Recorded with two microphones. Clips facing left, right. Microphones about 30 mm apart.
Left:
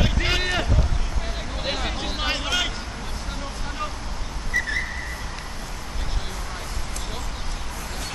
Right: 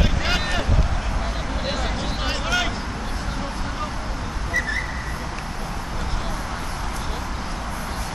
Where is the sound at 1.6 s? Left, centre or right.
Centre.